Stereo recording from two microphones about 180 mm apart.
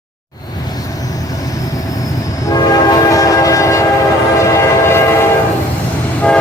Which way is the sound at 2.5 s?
20° left (ahead or behind).